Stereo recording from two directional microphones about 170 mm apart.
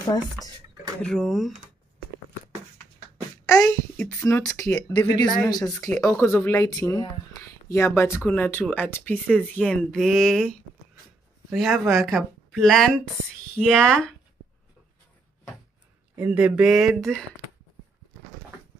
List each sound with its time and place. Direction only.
1.0 s a woman's voice: centre (ahead or behind)
3.4 s a child's voice: 15° left (ahead or behind)
11.5 s a woman's voice: centre (ahead or behind)
16.2 s a woman's voice: 10° right (ahead or behind)